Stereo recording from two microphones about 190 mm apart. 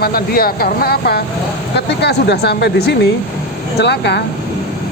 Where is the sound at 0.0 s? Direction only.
50° left (ahead or behind).